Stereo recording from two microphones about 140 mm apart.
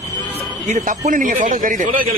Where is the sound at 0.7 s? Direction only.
70° right (ahead or behind).